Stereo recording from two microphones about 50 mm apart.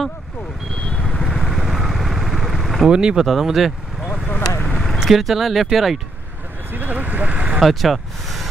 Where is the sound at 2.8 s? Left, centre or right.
Centre.